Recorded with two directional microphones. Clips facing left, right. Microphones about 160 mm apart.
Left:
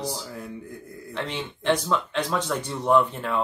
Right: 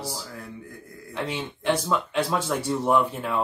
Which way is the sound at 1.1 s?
10° right (ahead or behind).